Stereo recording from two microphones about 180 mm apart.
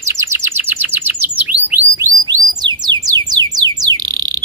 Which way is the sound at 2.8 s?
20° right (ahead or behind).